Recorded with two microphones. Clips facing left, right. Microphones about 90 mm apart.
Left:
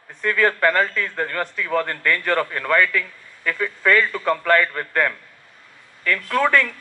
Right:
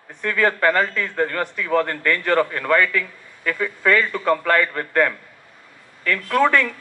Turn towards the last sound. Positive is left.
turn(degrees=-20)  # may be behind; listen again after turning